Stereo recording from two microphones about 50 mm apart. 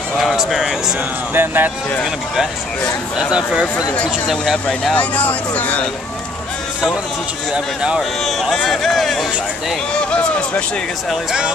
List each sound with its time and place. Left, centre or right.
0.2 s speech: centre
1.3 s speech: right
3.2 s speech: centre
3.6 s speech: left
7.5 s speech: centre
8.2 s speech: centre